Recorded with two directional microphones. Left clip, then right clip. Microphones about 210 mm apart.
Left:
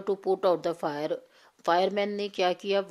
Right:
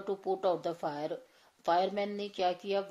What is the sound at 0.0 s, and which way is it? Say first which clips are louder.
A woman's voice: left 6 dB; 35° left (ahead or behind).